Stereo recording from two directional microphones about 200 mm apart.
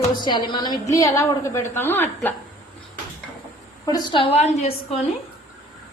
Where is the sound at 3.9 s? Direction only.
25° left (ahead or behind).